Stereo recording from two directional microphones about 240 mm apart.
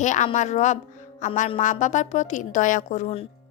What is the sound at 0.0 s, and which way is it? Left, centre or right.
A woman's voice, left.